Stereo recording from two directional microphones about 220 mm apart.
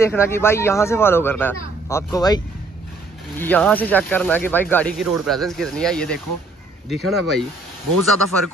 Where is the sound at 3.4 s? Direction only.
5° left (ahead or behind).